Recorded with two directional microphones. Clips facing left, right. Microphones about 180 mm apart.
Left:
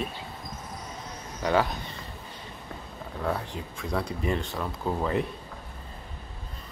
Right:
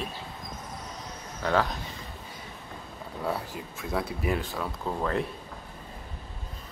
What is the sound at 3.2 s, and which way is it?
Speech, 5° right (ahead or behind).